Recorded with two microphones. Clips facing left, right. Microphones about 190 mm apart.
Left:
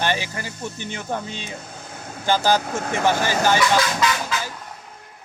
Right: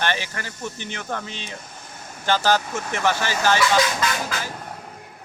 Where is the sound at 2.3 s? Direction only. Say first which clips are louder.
Left 1 dB; 15° left (ahead or behind).